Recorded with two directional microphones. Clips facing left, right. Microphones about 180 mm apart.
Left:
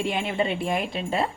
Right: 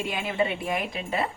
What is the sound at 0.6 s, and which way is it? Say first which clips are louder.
Speech: left 3 dB; 30° left (ahead or behind).